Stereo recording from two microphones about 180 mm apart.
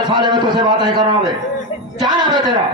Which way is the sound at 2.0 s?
25° right (ahead or behind).